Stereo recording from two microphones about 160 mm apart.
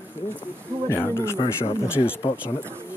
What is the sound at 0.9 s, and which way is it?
Speech, 15° left (ahead or behind).